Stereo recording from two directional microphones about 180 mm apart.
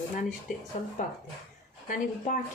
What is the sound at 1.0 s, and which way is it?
Speech, 45° left (ahead or behind).